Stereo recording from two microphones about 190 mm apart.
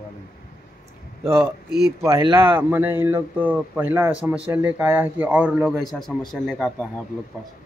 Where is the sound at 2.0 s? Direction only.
15° right (ahead or behind); by 6.9 s centre (ahead or behind).